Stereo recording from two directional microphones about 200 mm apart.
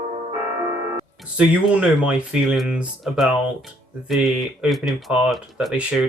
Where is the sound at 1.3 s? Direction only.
5° right (ahead or behind).